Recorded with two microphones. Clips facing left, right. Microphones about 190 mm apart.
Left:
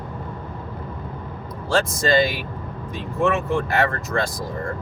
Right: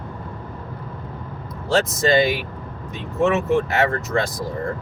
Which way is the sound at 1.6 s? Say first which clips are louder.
Right 2 dB; 20° right (ahead or behind).